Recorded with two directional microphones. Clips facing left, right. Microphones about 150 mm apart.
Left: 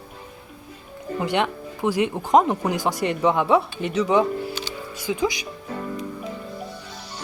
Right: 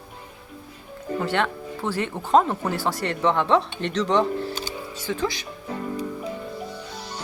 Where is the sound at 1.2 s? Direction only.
15° left (ahead or behind).